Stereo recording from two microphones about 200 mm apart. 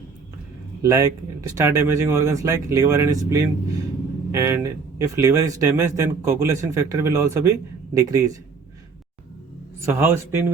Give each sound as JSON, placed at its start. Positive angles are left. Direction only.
{"t": 0.8, "sound": "speech", "side_deg": -15}
{"t": 9.8, "sound": "speech", "side_deg": -10}